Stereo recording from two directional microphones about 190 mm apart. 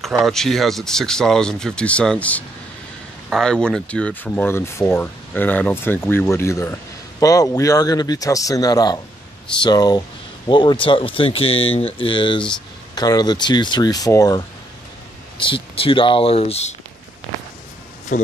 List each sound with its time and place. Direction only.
0.2 s speech: centre (ahead or behind); by 16.7 s 30° left (ahead or behind)
18.1 s speech: 45° left (ahead or behind)